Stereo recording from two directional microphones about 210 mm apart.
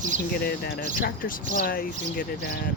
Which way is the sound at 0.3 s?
50° left (ahead or behind).